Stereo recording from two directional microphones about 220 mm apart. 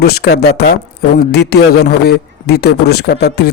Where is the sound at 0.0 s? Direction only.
45° left (ahead or behind).